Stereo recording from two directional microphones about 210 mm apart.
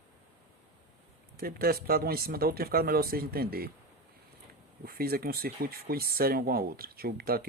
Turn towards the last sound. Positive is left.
turn(degrees=-45)  # may be behind; listen again after turning